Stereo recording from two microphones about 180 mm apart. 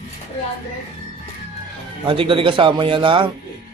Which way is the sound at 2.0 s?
30° right (ahead or behind).